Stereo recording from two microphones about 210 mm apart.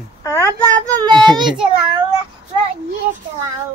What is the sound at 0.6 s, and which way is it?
Child singing, 15° right (ahead or behind).